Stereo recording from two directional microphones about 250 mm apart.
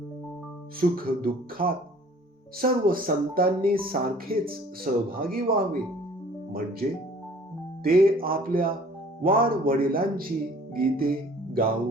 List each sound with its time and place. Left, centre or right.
0.8 s speech: right
7.9 s speech: right
10.8 s music: right